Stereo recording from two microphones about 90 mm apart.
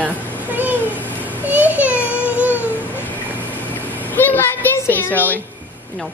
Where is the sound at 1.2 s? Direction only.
20° right (ahead or behind).